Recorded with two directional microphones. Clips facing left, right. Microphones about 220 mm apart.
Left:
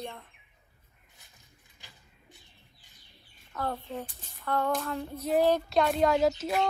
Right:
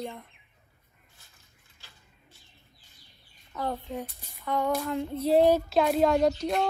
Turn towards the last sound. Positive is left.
turn(degrees=5)  # may be behind; listen again after turning